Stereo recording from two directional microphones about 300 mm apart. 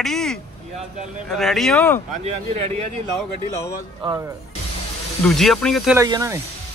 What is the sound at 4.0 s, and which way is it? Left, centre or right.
Speech, centre.